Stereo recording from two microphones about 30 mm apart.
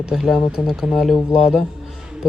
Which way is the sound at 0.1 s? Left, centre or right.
Centre.